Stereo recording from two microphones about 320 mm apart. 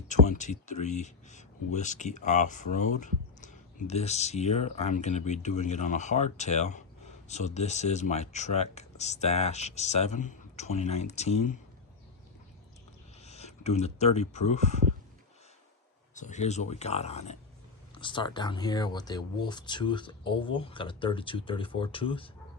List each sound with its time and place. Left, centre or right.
0.1 s speech: left
13.2 s speech: centre
16.1 s speech: left